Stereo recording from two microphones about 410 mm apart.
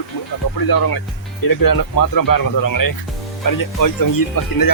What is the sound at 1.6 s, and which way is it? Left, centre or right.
Speech, left.